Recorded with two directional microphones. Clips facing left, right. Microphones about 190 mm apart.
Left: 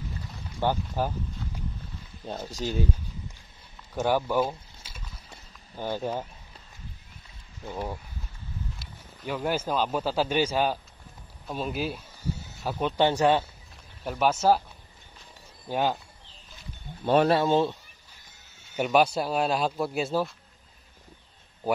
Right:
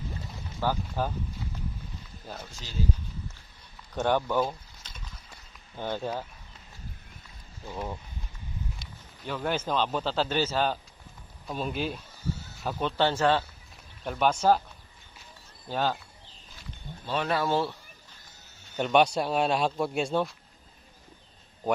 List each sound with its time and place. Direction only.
0.6 s speech: 15° left (ahead or behind)
2.2 s speech: 30° left (ahead or behind)
2.6 s speech: 60° left (ahead or behind)
3.9 s a sound: 5° left (ahead or behind)
5.8 s speech: 10° left (ahead or behind)
9.2 s speech: 10° left (ahead or behind)
14.0 s speech: 5° left (ahead or behind)
15.7 s speech: 15° left (ahead or behind)
17.0 s speech: 50° left (ahead or behind)
17.3 s speech: 20° left (ahead or behind)
18.8 s speech: 5° left (ahead or behind)